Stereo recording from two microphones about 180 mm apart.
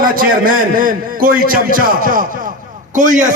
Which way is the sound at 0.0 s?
50° right (ahead or behind).